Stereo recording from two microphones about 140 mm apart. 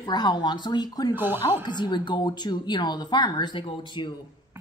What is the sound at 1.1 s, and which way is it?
Speech, 15° right (ahead or behind).